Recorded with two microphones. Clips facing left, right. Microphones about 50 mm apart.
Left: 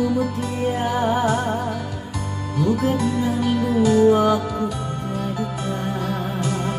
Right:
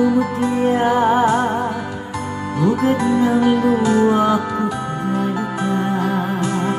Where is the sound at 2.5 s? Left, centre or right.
Right.